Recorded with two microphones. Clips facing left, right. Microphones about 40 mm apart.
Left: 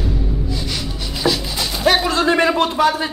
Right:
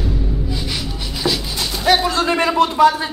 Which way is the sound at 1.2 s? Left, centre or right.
Centre.